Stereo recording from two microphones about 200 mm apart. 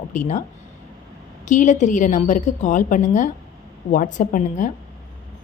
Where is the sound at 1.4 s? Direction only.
40° left (ahead or behind).